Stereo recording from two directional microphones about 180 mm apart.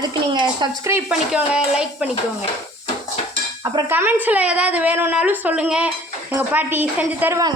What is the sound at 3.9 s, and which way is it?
Speech, 10° right (ahead or behind).